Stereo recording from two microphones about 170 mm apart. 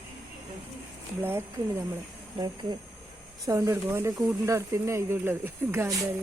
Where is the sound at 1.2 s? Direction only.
15° right (ahead or behind).